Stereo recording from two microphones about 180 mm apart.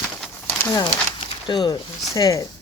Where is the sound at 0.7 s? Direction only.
25° left (ahead or behind).